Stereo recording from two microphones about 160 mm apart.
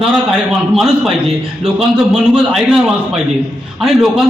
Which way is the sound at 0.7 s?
Centre (ahead or behind).